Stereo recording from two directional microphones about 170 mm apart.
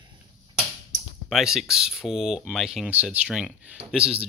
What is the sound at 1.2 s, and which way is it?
Speech, 5° right (ahead or behind).